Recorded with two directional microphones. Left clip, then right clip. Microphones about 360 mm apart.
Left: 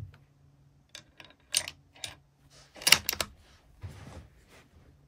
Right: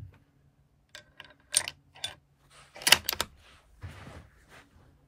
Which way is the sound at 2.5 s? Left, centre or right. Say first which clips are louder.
Right 1 dB; centre.